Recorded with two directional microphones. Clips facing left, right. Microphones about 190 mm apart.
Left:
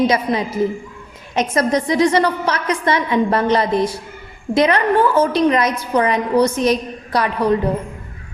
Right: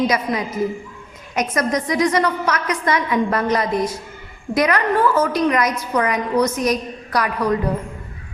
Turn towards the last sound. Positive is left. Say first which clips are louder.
# left 3 dB
turn(degrees=30)  # may be behind; listen again after turning